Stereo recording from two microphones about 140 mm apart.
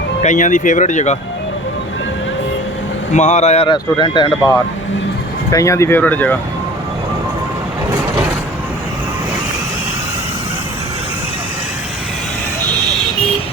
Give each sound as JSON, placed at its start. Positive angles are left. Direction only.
{"t": 0.2, "sound": "speech", "side_deg": 65}
{"t": 3.1, "sound": "speech", "side_deg": 55}
{"t": 3.7, "sound": "speech", "side_deg": 35}